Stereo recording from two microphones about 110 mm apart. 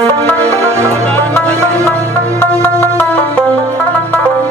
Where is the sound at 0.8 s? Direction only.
15° left (ahead or behind).